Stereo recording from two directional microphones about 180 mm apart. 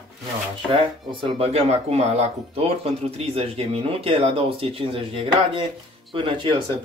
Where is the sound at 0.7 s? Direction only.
30° right (ahead or behind).